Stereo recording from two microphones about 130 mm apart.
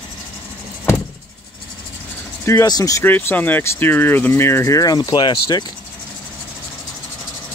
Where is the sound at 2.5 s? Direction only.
25° left (ahead or behind).